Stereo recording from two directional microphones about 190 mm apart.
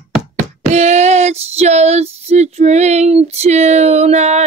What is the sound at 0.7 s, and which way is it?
Child singing, 35° right (ahead or behind).